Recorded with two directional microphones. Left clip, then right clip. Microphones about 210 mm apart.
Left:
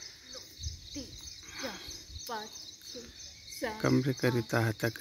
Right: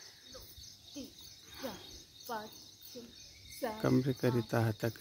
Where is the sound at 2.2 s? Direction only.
45° left (ahead or behind).